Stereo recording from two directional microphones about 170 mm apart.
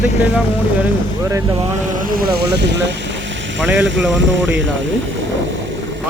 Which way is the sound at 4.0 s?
90° right.